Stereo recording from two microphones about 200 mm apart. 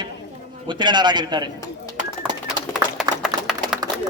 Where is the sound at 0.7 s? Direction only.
20° right (ahead or behind).